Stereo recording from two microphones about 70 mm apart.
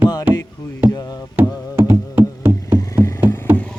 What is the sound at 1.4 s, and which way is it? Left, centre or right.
Music, right.